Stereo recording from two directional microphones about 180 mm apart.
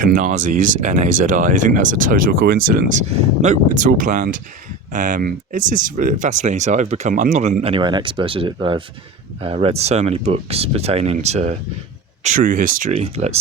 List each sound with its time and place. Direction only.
0.0 s speech: 45° right (ahead or behind)
12.2 s speech: 50° right (ahead or behind)